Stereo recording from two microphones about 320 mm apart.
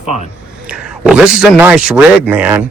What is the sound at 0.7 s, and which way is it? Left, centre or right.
A man's voice, centre.